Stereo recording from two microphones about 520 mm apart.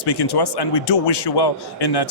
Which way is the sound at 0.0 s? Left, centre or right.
Left.